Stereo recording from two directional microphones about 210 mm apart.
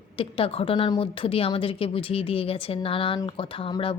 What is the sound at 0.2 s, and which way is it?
A woman's voice, 25° left (ahead or behind).